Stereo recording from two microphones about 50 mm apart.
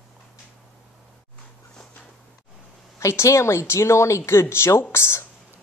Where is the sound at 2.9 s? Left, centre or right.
Left.